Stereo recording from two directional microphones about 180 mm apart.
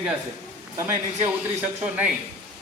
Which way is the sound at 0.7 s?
15° right (ahead or behind).